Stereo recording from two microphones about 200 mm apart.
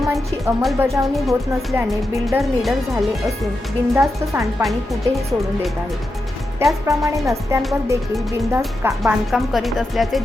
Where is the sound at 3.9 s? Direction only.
15° right (ahead or behind).